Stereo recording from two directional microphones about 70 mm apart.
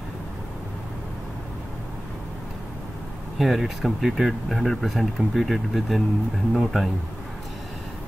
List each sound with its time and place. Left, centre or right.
3.3 s speech: centre